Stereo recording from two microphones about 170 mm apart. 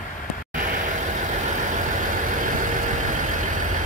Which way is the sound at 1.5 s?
50° right (ahead or behind).